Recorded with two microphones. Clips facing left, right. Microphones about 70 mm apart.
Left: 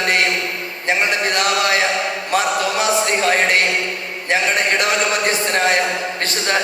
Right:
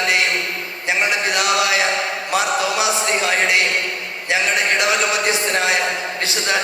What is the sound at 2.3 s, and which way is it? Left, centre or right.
Chant, left.